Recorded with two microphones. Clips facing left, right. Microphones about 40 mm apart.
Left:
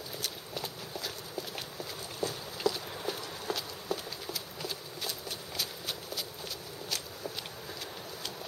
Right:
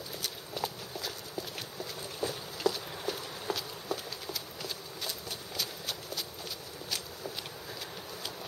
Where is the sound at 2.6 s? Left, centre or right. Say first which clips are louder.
Even; centre.